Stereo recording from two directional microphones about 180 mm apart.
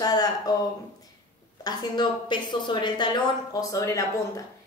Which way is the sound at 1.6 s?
25° left (ahead or behind).